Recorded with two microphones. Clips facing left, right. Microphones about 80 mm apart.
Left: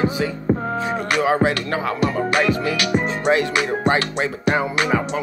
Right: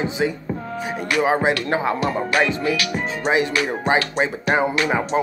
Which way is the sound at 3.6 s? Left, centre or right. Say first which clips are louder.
Left 1 dB; centre.